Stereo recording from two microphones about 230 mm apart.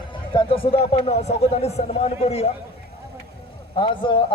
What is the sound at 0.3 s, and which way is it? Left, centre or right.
Speech, left.